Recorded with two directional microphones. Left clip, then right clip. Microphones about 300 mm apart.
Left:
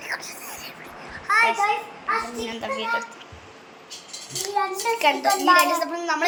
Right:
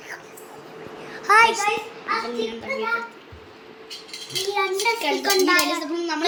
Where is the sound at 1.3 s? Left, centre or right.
Centre.